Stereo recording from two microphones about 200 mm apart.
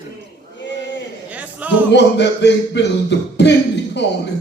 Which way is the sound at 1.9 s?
60° left (ahead or behind).